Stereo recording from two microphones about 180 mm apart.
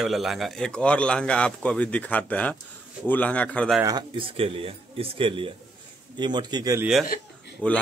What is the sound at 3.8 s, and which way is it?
Speech, 25° right (ahead or behind).